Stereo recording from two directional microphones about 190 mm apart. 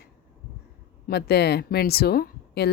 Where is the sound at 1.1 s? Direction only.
60° left (ahead or behind).